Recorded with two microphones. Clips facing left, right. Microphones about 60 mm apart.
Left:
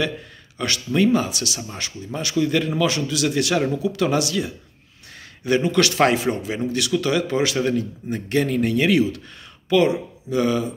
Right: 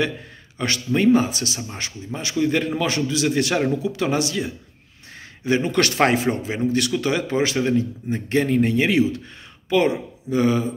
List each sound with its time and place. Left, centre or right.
0.6 s a man's voice: right
5.7 s speech: right